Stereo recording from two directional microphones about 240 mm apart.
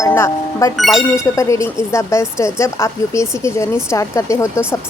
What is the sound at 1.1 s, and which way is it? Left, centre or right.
Speech, centre.